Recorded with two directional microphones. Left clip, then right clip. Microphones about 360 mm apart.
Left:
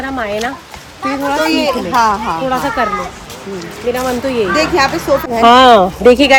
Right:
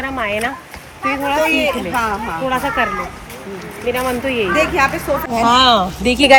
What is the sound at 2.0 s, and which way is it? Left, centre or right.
Speech, centre.